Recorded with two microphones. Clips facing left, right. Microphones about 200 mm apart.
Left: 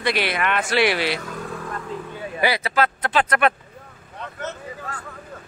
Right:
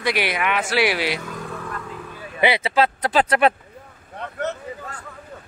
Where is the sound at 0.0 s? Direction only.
10° right (ahead or behind).